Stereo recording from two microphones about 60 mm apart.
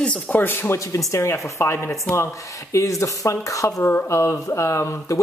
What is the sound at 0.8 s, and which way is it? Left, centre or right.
Speech, left.